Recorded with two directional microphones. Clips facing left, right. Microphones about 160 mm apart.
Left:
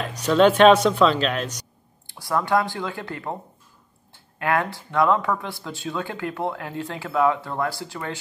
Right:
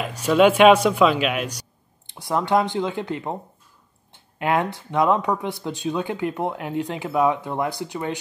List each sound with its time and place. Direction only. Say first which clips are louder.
0.0 s speech: right 1 dB; 10° right (ahead or behind)
2.0 s speech: right 1 dB; 20° right (ahead or behind)